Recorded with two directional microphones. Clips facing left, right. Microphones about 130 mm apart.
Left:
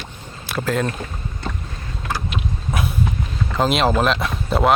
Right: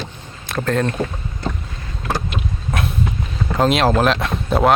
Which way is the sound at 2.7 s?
5° left (ahead or behind).